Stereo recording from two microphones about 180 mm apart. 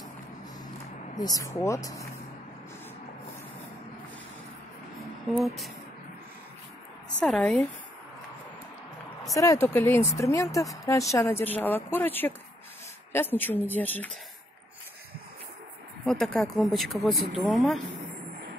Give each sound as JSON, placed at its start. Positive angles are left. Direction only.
{"t": 1.1, "sound": "speech", "side_deg": 20}
{"t": 5.3, "sound": "speech", "side_deg": 0}
{"t": 7.2, "sound": "speech", "side_deg": 0}
{"t": 9.3, "sound": "speech", "side_deg": 20}
{"t": 16.1, "sound": "speech", "side_deg": 0}